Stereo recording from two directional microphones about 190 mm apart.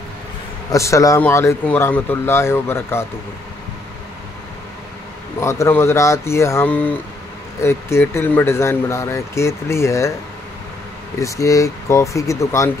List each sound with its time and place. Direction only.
0.7 s speech: 15° left (ahead or behind)
5.4 s speech: 15° left (ahead or behind)
11.1 s speech: 15° left (ahead or behind)